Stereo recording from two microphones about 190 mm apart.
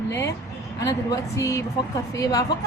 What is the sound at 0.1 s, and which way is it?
A woman's voice, 15° left (ahead or behind).